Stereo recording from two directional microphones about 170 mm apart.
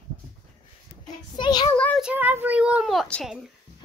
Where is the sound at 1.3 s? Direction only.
25° left (ahead or behind).